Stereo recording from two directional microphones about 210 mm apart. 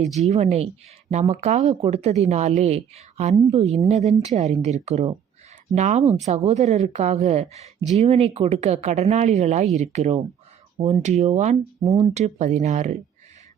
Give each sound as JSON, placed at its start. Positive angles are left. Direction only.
{"t": 0.2, "sound": "speech", "side_deg": -35}